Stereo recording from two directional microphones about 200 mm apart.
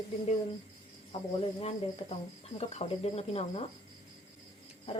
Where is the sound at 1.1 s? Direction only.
30° left (ahead or behind).